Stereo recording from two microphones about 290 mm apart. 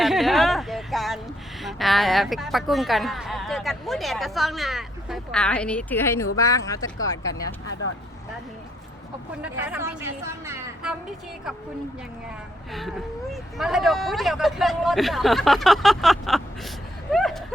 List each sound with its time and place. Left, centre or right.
0.0 s a sound: centre
1.6 s speech: centre
9.4 s a woman's voice: centre
13.3 s speech: centre